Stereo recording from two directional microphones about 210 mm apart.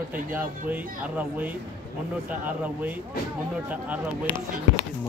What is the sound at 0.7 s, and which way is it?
Speech, 5° right (ahead or behind).